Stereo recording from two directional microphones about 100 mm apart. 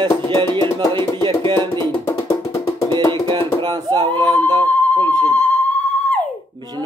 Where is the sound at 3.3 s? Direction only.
50° right (ahead or behind).